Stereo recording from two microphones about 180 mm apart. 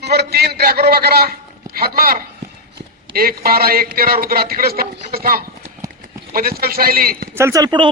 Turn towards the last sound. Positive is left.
turn(degrees=-25)  # may be behind; listen again after turning